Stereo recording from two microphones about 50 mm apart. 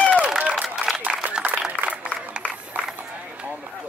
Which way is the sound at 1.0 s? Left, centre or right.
Right.